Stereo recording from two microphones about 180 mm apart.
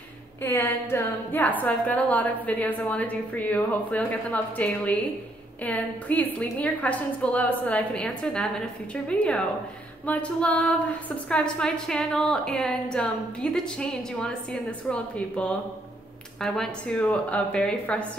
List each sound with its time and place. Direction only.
0.4 s a woman's voice: 10° left (ahead or behind)
10.0 s a woman's voice: 10° left (ahead or behind)